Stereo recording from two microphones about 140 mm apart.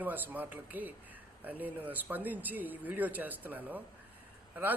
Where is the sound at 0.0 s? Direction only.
10° right (ahead or behind).